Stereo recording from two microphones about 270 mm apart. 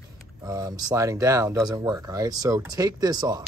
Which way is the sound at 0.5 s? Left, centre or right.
Centre.